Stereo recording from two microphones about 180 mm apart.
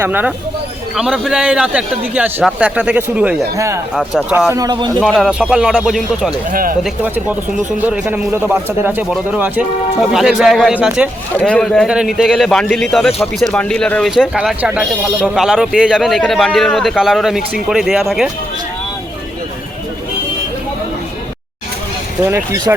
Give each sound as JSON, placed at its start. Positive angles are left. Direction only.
{"t": 0.0, "sound": "a man's voice", "side_deg": -10}
{"t": 4.5, "sound": "a man's voice", "side_deg": -25}
{"t": 4.9, "sound": "speech", "side_deg": 0}
{"t": 6.5, "sound": "speech", "side_deg": -50}
{"t": 6.8, "sound": "a man's voice", "side_deg": -10}
{"t": 11.3, "sound": "speech", "side_deg": 5}
{"t": 22.2, "sound": "a man's voice", "side_deg": -10}